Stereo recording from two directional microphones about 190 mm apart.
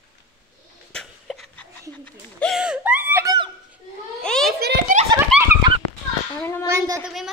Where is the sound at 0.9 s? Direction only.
Centre (ahead or behind).